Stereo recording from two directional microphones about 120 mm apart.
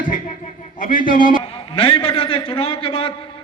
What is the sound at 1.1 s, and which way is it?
A man's voice, 45° left (ahead or behind).